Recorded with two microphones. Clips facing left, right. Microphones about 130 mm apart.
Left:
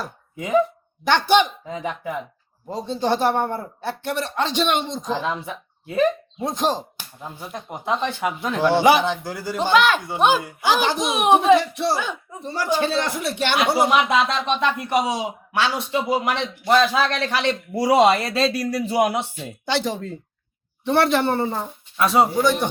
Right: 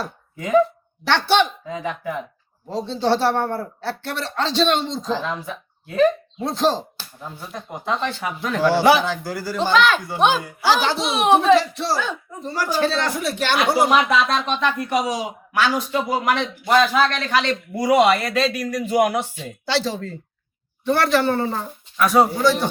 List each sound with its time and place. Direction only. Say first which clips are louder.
0.3 s speech: right 2 dB; 15° left (ahead or behind)
9.7 s speech: even; 10° left (ahead or behind)
10.4 s speech: right 1 dB; 20° left (ahead or behind)